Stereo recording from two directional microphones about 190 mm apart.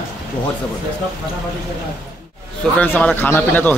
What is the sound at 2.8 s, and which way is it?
Speech, 5° left (ahead or behind).